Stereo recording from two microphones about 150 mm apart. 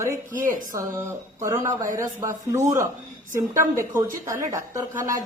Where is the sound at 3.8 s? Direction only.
20° right (ahead or behind).